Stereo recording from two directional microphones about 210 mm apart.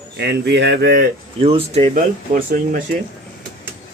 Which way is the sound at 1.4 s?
30° right (ahead or behind).